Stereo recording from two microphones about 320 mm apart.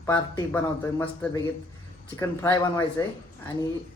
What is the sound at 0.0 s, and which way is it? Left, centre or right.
Speech, centre.